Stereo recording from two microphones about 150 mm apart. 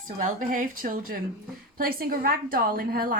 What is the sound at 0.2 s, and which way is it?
A woman's voice, 60° right (ahead or behind).